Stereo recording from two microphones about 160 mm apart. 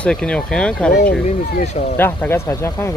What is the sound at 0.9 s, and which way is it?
Speech, 90° left.